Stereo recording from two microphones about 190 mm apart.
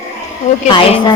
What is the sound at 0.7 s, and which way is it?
Speech, 25° left (ahead or behind).